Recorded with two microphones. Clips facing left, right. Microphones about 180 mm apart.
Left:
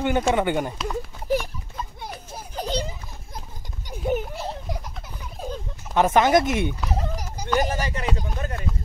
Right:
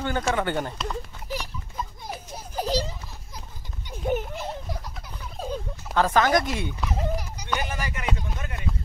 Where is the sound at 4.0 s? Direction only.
Centre (ahead or behind).